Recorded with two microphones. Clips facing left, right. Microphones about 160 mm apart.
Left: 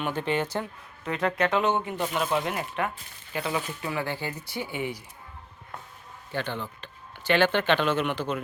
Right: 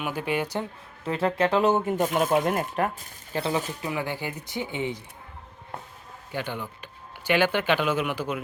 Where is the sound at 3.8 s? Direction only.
15° right (ahead or behind).